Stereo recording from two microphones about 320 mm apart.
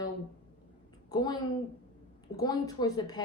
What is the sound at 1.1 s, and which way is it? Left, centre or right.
Speech, centre.